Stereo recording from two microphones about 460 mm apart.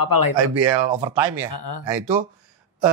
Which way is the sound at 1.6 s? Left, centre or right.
Left.